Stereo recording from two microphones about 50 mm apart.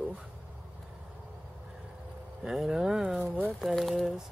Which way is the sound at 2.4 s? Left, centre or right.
Centre.